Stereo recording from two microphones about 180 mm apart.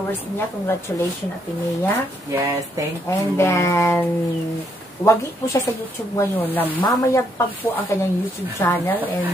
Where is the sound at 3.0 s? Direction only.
15° left (ahead or behind).